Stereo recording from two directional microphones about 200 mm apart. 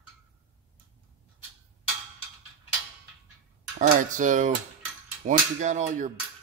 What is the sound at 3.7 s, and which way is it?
Cutlery, 40° right (ahead or behind).